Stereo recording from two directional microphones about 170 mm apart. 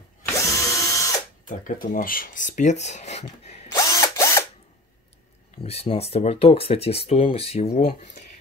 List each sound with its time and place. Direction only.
0.2 s drill: 20° left (ahead or behind)
1.5 s speech: 50° left (ahead or behind)
3.7 s drill: 20° left (ahead or behind)
5.6 s speech: 35° left (ahead or behind)